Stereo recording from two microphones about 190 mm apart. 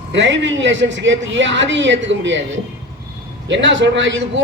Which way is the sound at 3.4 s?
70° right (ahead or behind).